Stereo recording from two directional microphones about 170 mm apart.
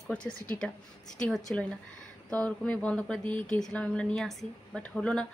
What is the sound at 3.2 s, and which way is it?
Speech, 30° right (ahead or behind).